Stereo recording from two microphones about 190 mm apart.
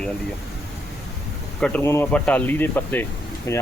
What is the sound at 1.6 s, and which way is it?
Speech, 5° left (ahead or behind).